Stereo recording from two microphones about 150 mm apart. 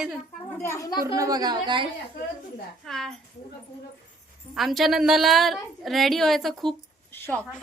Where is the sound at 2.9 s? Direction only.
5° left (ahead or behind).